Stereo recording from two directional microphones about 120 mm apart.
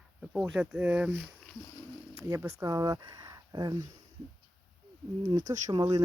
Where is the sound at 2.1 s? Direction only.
25° right (ahead or behind).